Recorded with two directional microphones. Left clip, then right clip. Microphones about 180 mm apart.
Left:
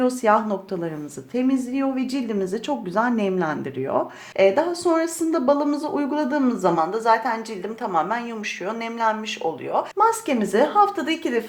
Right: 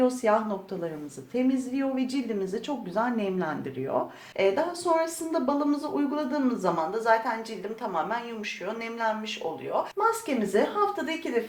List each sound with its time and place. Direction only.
0.0 s a woman's voice: 40° left (ahead or behind)